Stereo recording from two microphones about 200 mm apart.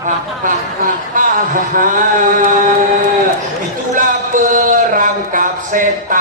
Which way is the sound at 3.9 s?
40° right (ahead or behind).